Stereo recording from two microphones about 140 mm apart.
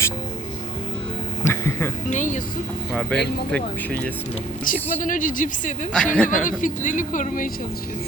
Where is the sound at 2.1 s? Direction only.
65° left (ahead or behind).